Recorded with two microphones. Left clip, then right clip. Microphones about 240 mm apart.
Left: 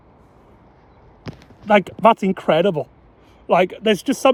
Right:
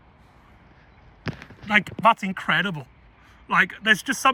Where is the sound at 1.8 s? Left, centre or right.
Centre.